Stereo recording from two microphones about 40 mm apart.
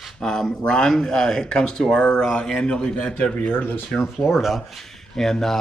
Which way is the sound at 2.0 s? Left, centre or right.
Left.